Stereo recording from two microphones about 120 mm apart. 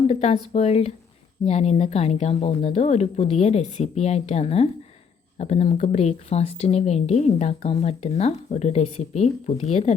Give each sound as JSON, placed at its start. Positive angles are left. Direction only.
{"t": 0.1, "sound": "a woman's voice", "side_deg": 65}